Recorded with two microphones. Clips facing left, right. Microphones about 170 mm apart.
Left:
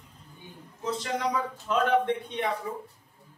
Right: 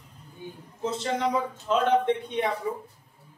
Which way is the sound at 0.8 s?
25° right (ahead or behind).